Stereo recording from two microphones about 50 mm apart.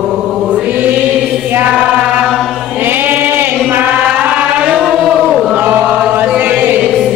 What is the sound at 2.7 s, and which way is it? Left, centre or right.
Choir, right.